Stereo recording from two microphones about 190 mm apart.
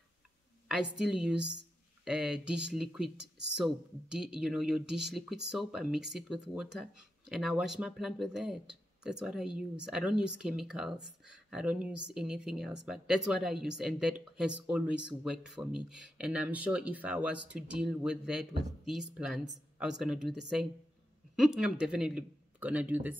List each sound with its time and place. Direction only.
0.9 s speech: 5° right (ahead or behind)
3.2 s speech: 65° right (ahead or behind)
3.5 s speech: 5° right (ahead or behind)